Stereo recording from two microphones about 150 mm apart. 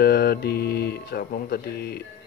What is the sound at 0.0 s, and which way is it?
Speech, 90° left.